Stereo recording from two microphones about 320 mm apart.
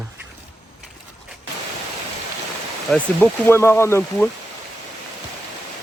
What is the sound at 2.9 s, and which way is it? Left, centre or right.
Speech, centre.